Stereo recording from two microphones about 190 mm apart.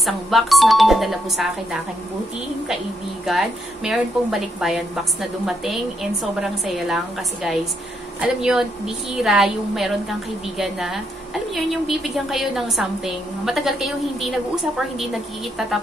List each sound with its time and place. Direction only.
0.0 s a woman's voice: centre (ahead or behind)
3.3 s a woman's voice: centre (ahead or behind)
8.2 s a woman's voice: 5° right (ahead or behind)